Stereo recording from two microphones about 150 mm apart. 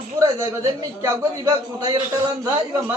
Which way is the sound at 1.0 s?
25° right (ahead or behind).